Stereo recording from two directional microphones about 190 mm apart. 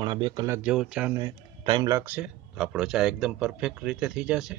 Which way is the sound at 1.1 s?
25° right (ahead or behind).